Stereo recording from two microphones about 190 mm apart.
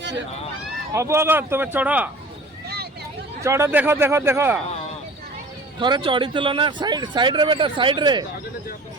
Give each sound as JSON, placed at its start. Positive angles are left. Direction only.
{"t": 0.9, "sound": "speech", "side_deg": -15}
{"t": 3.4, "sound": "speech", "side_deg": -15}
{"t": 5.8, "sound": "speech", "side_deg": -25}